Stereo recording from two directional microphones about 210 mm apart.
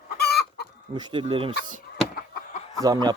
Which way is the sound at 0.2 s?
50° left (ahead or behind).